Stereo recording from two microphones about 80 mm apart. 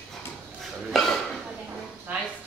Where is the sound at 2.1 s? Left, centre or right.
Right.